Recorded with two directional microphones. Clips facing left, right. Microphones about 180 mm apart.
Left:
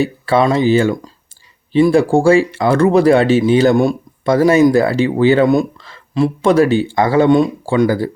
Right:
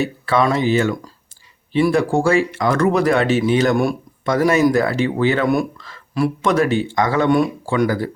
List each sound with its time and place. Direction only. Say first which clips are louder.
0.0 s speech: left 4 dB; 30° left (ahead or behind)